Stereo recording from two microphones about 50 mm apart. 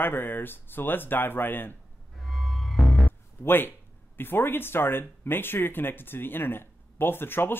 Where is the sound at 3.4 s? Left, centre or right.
Left.